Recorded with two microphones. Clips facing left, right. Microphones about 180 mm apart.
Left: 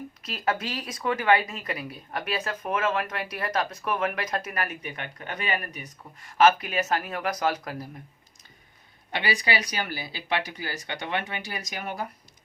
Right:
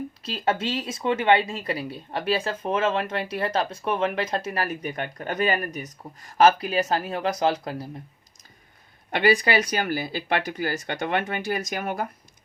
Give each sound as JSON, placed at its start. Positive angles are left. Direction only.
{"t": 0.3, "sound": "speech", "side_deg": -30}
{"t": 9.1, "sound": "speech", "side_deg": -50}